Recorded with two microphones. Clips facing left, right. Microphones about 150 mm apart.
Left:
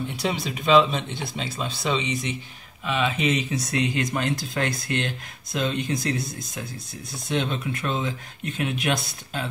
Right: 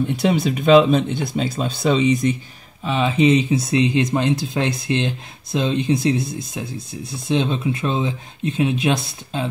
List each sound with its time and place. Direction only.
0.1 s speech: 55° right (ahead or behind)
2.8 s speech: 30° right (ahead or behind)